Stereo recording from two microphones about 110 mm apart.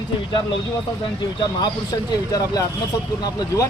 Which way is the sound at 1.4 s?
40° left (ahead or behind).